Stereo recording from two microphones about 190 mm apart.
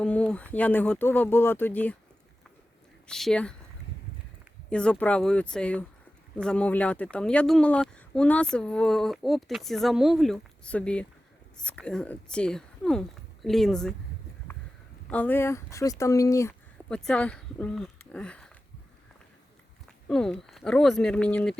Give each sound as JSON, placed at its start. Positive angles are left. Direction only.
{"t": 0.0, "sound": "speech", "side_deg": 5}
{"t": 3.1, "sound": "speech", "side_deg": 0}
{"t": 4.7, "sound": "speech", "side_deg": 5}
{"t": 15.1, "sound": "speech", "side_deg": 10}
{"t": 16.9, "sound": "speech", "side_deg": 5}
{"t": 20.1, "sound": "speech", "side_deg": 5}